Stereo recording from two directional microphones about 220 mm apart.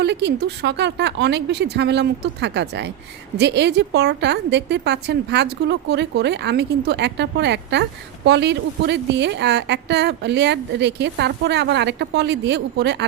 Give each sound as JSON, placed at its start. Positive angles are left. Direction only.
{"t": 0.0, "sound": "a woman's voice", "side_deg": -50}